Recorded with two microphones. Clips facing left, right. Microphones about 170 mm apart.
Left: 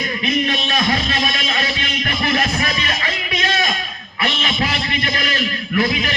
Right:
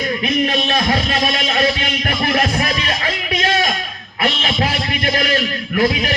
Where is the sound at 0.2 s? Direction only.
50° right (ahead or behind).